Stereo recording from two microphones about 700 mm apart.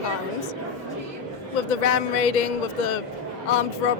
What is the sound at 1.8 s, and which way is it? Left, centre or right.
Speech, left.